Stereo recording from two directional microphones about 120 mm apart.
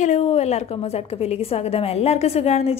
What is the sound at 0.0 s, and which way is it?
A woman's voice, 70° left (ahead or behind).